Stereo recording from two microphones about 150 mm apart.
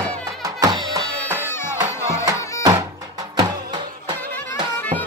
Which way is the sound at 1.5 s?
15° left (ahead or behind).